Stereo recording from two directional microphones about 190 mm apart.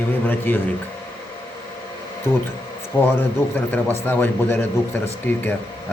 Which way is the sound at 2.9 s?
20° left (ahead or behind).